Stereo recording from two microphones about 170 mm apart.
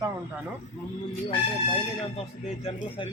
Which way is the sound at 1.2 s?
35° left (ahead or behind).